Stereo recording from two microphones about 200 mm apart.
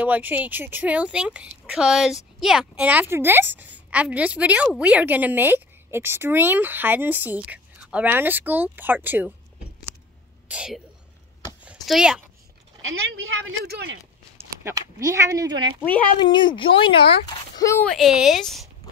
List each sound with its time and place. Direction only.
0.0 s speech: 10° right (ahead or behind)
10.5 s a woman's voice: 5° right (ahead or behind)
11.6 s a sound: 5° right (ahead or behind)
12.8 s speech: 90° right
13.7 s speech: 55° right (ahead or behind)
14.6 s speech: 15° right (ahead or behind)
16.2 s a woman's voice: 20° left (ahead or behind)
17.9 s speech: centre (ahead or behind)